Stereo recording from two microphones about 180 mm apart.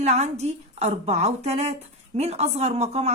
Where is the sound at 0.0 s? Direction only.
40° right (ahead or behind).